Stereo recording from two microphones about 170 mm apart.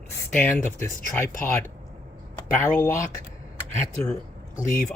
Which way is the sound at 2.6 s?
15° left (ahead or behind).